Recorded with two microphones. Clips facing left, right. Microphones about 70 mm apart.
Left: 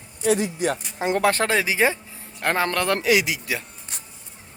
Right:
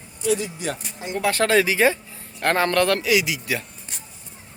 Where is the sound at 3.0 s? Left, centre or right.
Left.